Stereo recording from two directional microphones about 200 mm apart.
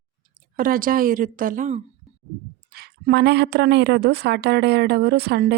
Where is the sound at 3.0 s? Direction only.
55° right (ahead or behind).